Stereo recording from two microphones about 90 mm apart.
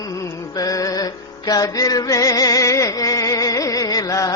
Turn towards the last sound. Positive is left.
turn(degrees=40)  # may be behind; listen again after turning